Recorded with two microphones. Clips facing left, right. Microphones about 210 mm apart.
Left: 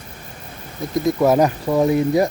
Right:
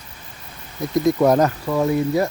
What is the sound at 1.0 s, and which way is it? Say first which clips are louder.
Speech: even; 5° left (ahead or behind).